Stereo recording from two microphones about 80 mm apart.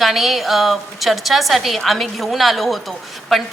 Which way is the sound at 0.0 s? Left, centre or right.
Centre.